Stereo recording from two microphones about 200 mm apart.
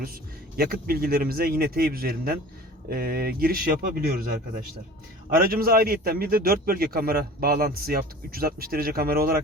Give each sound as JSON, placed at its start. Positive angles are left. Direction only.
{"t": 0.0, "sound": "a man's voice", "side_deg": -50}